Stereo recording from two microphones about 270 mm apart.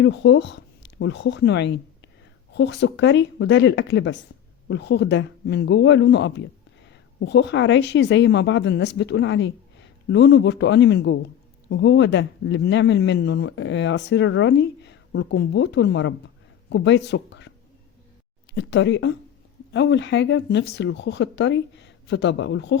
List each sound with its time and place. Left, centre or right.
0.0 s speech: left
18.5 s speech: left